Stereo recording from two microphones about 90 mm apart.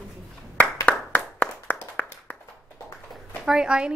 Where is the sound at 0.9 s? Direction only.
20° left (ahead or behind).